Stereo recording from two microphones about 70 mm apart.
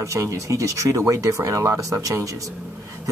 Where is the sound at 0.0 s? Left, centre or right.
Right.